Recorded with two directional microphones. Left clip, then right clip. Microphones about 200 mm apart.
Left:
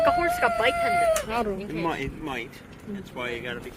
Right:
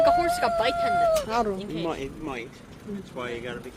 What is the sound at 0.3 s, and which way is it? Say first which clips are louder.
Speech: left 1 dB; 25° left (ahead or behind).